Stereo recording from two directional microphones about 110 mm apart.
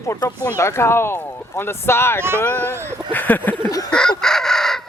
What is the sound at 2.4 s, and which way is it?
Speech, 15° left (ahead or behind).